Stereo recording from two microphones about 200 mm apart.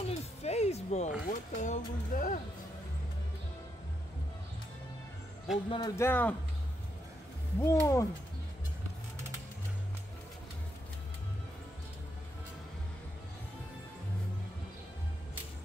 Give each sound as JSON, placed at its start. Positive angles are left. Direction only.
{"t": 0.0, "sound": "a sound", "side_deg": 30}
{"t": 1.3, "sound": "speech", "side_deg": 40}
{"t": 5.7, "sound": "a man's voice", "side_deg": 20}
{"t": 7.6, "sound": "a man's voice", "side_deg": 15}